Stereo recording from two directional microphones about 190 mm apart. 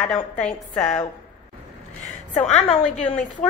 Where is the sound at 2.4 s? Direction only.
35° left (ahead or behind).